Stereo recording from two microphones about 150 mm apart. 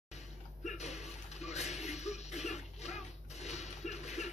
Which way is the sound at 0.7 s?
50° left (ahead or behind).